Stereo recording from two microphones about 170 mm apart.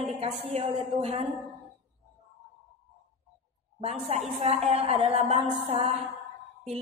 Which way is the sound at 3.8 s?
35° right (ahead or behind).